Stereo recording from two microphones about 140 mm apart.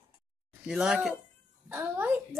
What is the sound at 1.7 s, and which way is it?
Speech, 15° right (ahead or behind).